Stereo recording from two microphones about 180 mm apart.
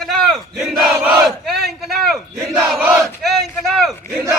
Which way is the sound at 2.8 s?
15° right (ahead or behind).